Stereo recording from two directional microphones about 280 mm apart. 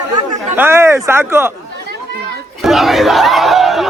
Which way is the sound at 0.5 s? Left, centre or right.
Centre.